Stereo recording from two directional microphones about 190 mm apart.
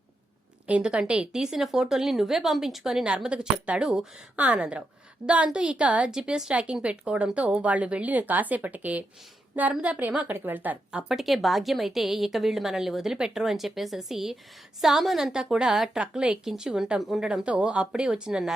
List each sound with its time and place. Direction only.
0.7 s a woman's voice: 5° right (ahead or behind)